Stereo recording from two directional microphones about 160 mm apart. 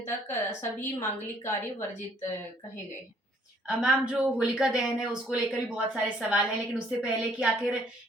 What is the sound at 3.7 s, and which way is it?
A woman's voice, 5° right (ahead or behind).